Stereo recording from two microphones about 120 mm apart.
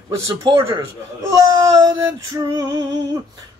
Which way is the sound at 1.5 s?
30° right (ahead or behind).